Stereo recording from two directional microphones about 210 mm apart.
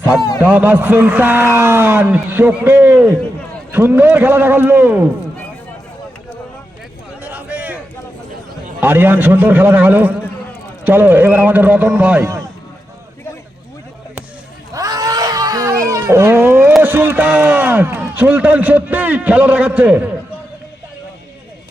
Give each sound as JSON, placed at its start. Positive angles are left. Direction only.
{"t": 0.2, "sound": "a man's voice", "side_deg": 15}
{"t": 0.4, "sound": "a man's voice", "side_deg": -10}
{"t": 7.2, "sound": "a sound", "side_deg": -5}
{"t": 8.8, "sound": "a man's voice", "side_deg": -10}
{"t": 14.7, "sound": "baby cry", "side_deg": -15}